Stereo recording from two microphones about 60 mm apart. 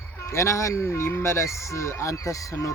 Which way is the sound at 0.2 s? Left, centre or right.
Left.